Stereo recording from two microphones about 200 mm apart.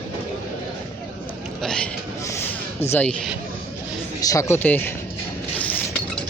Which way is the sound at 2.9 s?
5° left (ahead or behind).